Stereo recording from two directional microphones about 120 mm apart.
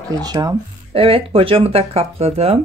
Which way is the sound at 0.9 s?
50° right (ahead or behind).